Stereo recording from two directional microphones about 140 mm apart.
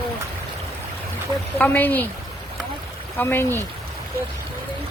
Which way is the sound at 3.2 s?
15° left (ahead or behind).